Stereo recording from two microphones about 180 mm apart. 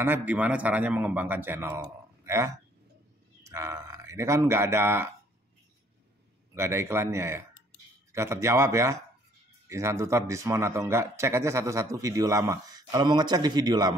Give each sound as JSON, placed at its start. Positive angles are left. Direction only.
{"t": 0.0, "sound": "a man's voice", "side_deg": -10}
{"t": 6.5, "sound": "a man's voice", "side_deg": -15}